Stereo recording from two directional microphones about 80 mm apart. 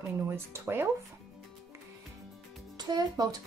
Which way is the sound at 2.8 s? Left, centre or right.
Right.